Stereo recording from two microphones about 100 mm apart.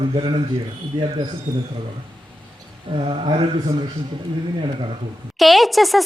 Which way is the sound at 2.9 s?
55° right (ahead or behind).